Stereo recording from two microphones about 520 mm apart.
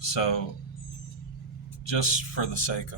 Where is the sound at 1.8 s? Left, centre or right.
Left.